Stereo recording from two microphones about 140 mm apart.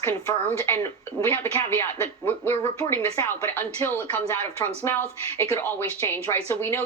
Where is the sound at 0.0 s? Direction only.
15° left (ahead or behind).